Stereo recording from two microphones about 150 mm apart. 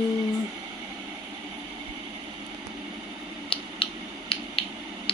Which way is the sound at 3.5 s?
35° left (ahead or behind).